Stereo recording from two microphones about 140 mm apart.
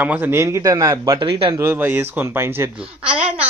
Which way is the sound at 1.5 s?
15° right (ahead or behind).